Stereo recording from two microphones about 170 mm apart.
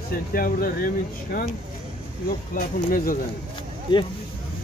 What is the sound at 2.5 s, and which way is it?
Speech, 50° left (ahead or behind).